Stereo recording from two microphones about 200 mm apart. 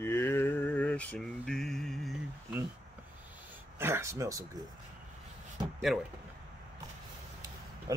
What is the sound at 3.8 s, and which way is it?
Speech, 15° right (ahead or behind).